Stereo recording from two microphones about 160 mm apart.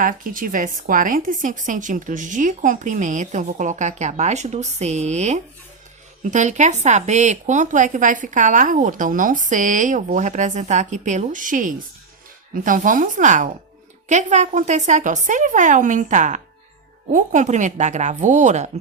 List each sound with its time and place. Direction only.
0.0 s a woman's voice: 60° right (ahead or behind)